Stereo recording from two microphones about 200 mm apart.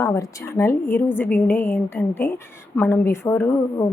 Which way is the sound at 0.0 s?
15° left (ahead or behind).